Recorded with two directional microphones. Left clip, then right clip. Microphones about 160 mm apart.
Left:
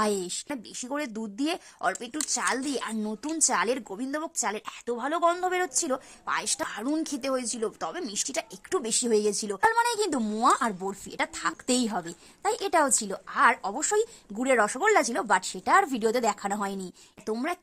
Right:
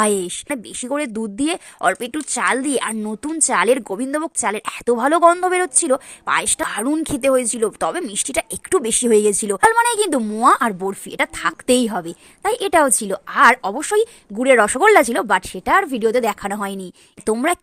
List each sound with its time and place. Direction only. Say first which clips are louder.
0.4 s a woman's voice: right 10 dB; 30° right (ahead or behind)
10.2 s speech: right 9 dB; 10° right (ahead or behind)
10.5 s a woman's voice: right 9 dB; 30° right (ahead or behind)